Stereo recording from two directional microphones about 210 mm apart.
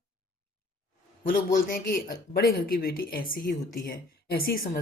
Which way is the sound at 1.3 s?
40° left (ahead or behind).